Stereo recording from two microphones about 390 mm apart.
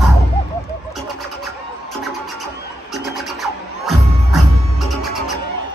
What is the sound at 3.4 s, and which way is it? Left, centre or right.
Music, centre.